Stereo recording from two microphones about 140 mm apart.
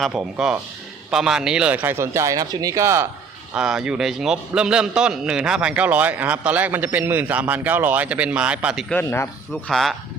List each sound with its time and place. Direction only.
0.0 s speech: 5° right (ahead or behind)
3.5 s a man's voice: 5° right (ahead or behind)
8.9 s speech: 15° left (ahead or behind)
9.5 s speech: centre (ahead or behind)